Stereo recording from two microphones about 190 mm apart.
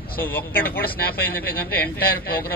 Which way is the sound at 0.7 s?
50° left (ahead or behind).